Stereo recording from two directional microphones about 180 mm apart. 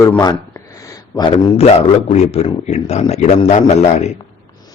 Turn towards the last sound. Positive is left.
turn(degrees=40)  # may be behind; listen again after turning